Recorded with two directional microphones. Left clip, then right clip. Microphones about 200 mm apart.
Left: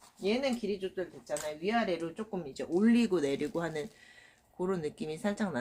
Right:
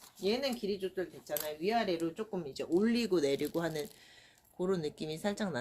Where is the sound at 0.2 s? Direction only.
5° left (ahead or behind).